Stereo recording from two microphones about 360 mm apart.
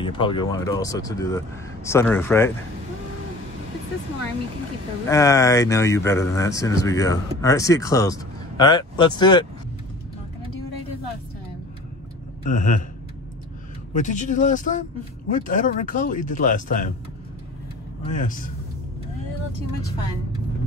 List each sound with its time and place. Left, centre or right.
0.0 s speech: centre
5.0 s speech: centre
12.4 s speech: left
13.9 s speech: centre
18.0 s speech: left